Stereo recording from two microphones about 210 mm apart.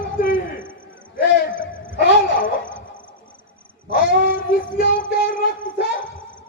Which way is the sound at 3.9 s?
45° left (ahead or behind).